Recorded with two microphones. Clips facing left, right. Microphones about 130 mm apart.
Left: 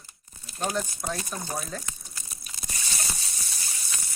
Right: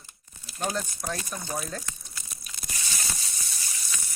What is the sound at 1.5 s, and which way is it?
Speech, centre (ahead or behind).